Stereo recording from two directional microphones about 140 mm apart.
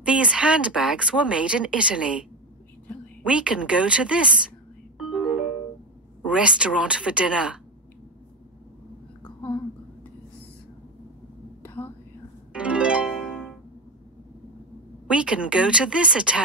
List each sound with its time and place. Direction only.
0.0 s speech: 5° right (ahead or behind)
3.3 s speech: 5° right (ahead or behind)
4.9 s music: centre (ahead or behind)
6.2 s speech: 5° right (ahead or behind)
9.2 s a sound: 15° left (ahead or behind)
11.6 s whispering: 15° left (ahead or behind)
12.5 s harp: 10° right (ahead or behind)
15.0 s speech: 5° right (ahead or behind)